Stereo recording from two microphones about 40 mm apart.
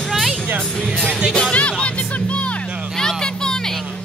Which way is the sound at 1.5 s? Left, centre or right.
Left.